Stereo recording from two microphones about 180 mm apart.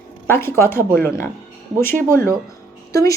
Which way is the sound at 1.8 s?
10° left (ahead or behind).